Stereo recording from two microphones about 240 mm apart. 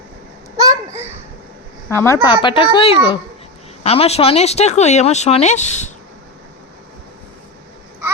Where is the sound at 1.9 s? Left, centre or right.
Centre; by 5.9 s left.